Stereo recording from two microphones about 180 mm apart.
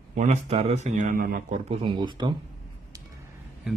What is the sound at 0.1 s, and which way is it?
A man's voice, 40° right (ahead or behind).